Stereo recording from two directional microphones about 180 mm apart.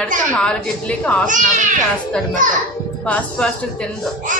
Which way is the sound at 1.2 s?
45° right (ahead or behind).